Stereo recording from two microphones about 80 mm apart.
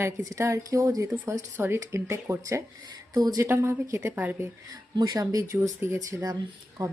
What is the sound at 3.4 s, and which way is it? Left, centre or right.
Speech, right.